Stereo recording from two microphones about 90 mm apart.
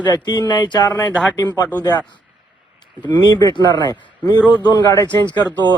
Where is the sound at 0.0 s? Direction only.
50° left (ahead or behind).